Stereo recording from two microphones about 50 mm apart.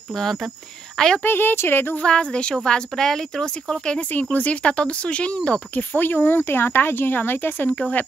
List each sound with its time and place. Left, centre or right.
0.1 s speech: centre
1.2 s speech: left
2.0 s speech: centre
4.1 s speech: left
5.8 s speech: left